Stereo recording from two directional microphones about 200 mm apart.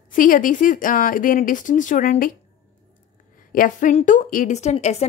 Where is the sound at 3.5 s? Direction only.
40° left (ahead or behind).